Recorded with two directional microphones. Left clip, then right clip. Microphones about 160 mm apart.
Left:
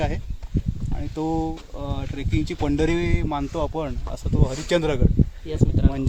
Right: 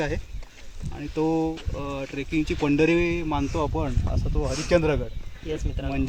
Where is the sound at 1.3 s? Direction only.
25° left (ahead or behind).